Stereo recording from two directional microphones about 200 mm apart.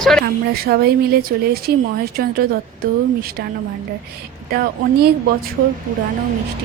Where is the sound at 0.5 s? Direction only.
50° right (ahead or behind).